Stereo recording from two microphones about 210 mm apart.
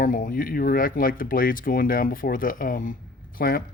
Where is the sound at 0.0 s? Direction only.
40° left (ahead or behind).